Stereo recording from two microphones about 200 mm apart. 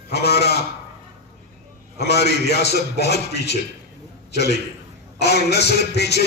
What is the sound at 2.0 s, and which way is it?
A man's voice, 55° left (ahead or behind).